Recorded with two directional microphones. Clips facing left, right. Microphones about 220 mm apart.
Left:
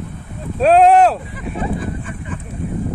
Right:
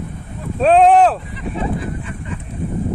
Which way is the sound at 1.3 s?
45° left (ahead or behind).